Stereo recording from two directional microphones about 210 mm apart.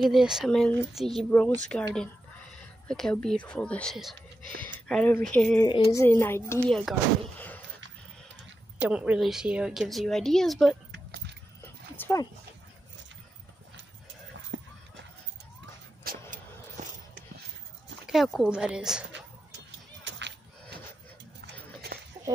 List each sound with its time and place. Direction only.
0.0 s a woman's voice: centre (ahead or behind)
2.9 s a woman's voice: 5° left (ahead or behind)
5.7 s speech: 20° left (ahead or behind)
8.7 s a woman's voice: 5° right (ahead or behind)
11.6 s dog: 15° left (ahead or behind)
16.0 s vehicle: 45° right (ahead or behind)
16.8 s a sound: 35° right (ahead or behind)
18.0 s a woman's voice: centre (ahead or behind)
20.1 s whip: 55° right (ahead or behind)